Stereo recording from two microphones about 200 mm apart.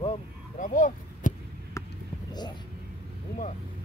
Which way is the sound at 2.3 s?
20° left (ahead or behind).